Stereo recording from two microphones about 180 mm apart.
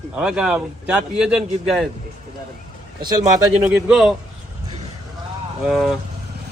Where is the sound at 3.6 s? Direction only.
5° right (ahead or behind).